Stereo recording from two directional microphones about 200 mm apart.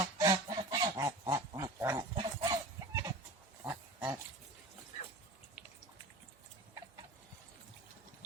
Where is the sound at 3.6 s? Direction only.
10° right (ahead or behind).